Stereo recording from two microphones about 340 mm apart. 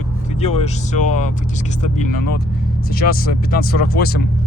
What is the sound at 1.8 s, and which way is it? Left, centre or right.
Speech, left.